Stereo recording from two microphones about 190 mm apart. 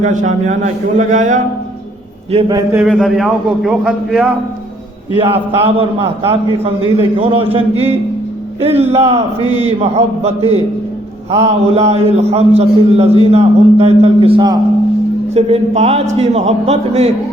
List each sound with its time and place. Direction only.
0.0 s a man's voice: 40° right (ahead or behind)
2.3 s a man's voice: 20° right (ahead or behind)
2.8 s a man's voice: centre (ahead or behind)
5.1 s a man's voice: 30° right (ahead or behind)